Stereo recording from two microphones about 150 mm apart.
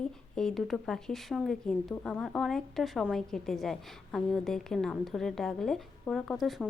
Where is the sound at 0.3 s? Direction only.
5° left (ahead or behind).